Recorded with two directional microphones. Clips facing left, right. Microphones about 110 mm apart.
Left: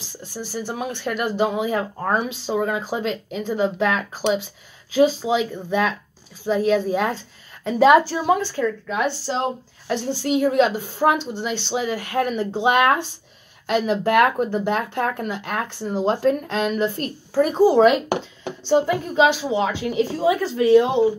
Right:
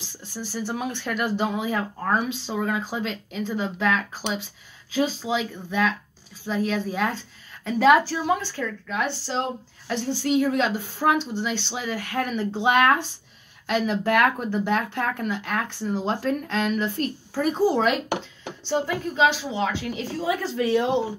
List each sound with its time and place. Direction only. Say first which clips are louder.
0.2 s speech: left 2 dB; 5° left (ahead or behind)